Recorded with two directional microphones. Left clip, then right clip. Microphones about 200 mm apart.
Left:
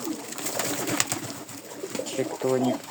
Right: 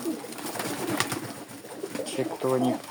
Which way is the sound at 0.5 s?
60° left (ahead or behind).